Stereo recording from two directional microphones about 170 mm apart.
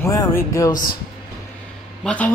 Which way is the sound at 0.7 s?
55° left (ahead or behind).